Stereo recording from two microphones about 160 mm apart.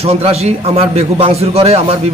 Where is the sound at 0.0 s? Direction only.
40° right (ahead or behind).